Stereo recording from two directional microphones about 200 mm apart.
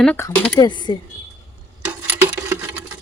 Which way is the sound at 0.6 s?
20° left (ahead or behind).